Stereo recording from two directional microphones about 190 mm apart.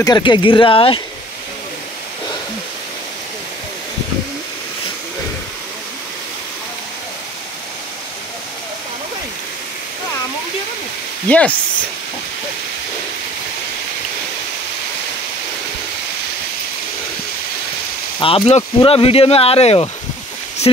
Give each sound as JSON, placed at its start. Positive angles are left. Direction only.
{"t": 0.0, "sound": "speech", "side_deg": 20}
{"t": 11.2, "sound": "speech", "side_deg": 5}
{"t": 18.2, "sound": "speech", "side_deg": 30}